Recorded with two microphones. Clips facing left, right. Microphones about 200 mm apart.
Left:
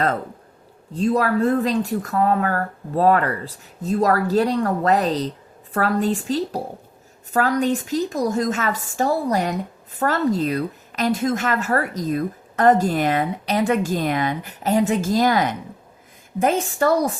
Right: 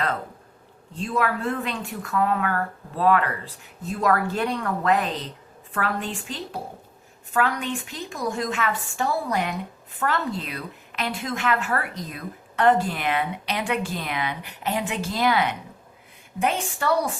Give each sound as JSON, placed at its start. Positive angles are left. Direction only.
{"t": 0.9, "sound": "a woman's voice", "side_deg": 40}